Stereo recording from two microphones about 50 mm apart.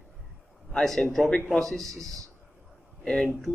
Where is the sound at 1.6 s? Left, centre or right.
Centre.